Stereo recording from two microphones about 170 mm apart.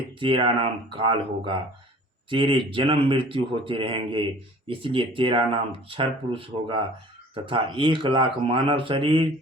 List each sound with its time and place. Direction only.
0.2 s speech: 30° right (ahead or behind)